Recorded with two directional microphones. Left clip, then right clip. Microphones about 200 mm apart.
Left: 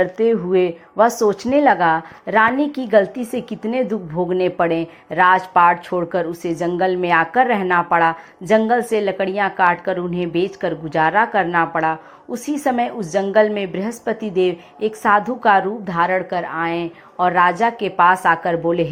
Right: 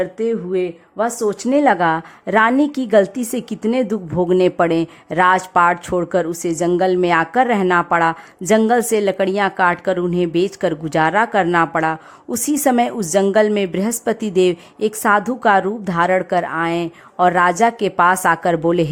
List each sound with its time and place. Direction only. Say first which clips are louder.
0.0 s speech: left 3 dB; 15° right (ahead or behind); by 18.9 s 40° right (ahead or behind)